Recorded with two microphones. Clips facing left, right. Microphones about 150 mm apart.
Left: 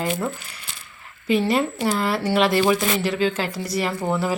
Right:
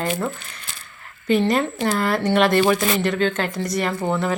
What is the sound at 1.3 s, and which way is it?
Speech, 5° left (ahead or behind).